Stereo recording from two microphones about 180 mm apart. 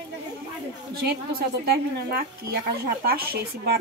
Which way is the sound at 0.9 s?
60° right (ahead or behind).